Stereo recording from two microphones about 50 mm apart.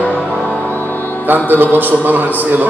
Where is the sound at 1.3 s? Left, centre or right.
Right.